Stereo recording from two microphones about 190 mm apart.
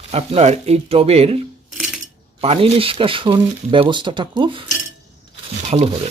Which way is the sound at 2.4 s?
30° right (ahead or behind).